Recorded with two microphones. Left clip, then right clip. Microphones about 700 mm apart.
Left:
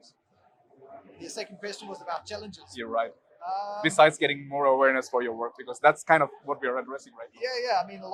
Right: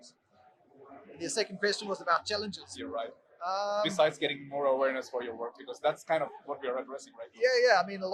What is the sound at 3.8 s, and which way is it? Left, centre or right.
Speech, left.